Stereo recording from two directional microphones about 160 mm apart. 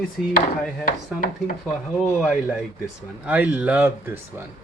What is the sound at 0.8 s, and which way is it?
Speech, 60° left (ahead or behind).